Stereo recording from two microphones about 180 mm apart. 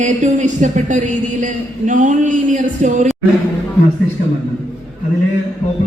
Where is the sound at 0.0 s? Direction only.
40° right (ahead or behind).